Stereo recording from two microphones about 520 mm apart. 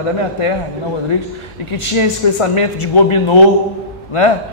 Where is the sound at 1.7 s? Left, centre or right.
Left.